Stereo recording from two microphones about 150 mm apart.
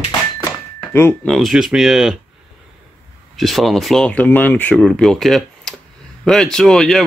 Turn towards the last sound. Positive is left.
turn(degrees=0)  # may be behind; listen again after turning